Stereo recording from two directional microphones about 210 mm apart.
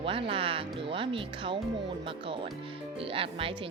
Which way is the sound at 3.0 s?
25° right (ahead or behind).